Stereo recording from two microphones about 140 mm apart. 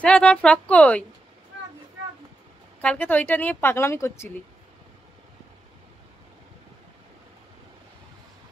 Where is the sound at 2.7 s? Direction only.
10° left (ahead or behind).